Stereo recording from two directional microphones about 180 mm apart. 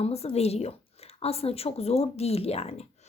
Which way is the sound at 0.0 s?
35° left (ahead or behind).